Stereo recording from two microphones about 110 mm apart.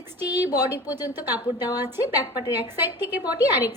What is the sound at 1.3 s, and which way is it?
Speech, 35° left (ahead or behind).